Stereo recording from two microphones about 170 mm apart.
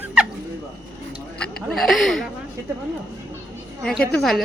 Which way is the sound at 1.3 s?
5° left (ahead or behind).